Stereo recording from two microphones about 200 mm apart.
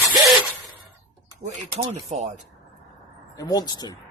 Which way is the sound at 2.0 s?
35° right (ahead or behind).